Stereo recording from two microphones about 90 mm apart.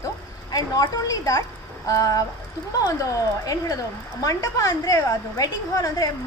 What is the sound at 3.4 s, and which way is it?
A woman's voice, 40° left (ahead or behind).